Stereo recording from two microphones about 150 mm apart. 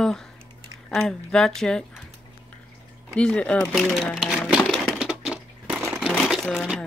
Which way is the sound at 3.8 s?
Centre (ahead or behind).